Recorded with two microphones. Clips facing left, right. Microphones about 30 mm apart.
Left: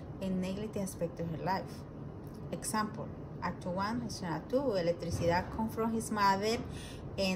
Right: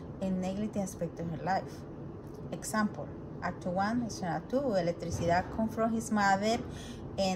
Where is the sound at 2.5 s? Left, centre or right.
Left.